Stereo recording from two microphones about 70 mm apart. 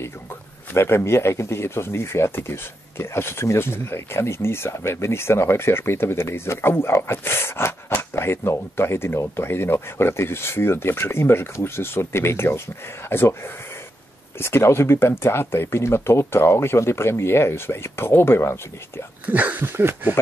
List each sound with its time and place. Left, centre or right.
0.7 s speech: left
19.2 s speech: right